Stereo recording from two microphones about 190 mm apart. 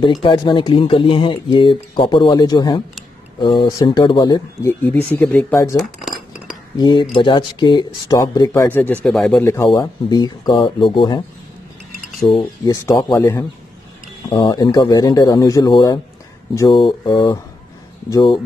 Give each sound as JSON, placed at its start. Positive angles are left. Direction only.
{"t": 0.0, "sound": "speech", "side_deg": 25}
{"t": 5.8, "sound": "cutlery", "side_deg": 0}
{"t": 6.8, "sound": "speech", "side_deg": 25}
{"t": 9.4, "sound": "speech", "side_deg": 15}
{"t": 12.3, "sound": "speech", "side_deg": 25}
{"t": 12.8, "sound": "speech", "side_deg": 15}